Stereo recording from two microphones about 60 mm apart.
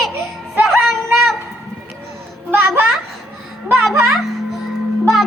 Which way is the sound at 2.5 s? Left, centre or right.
Right.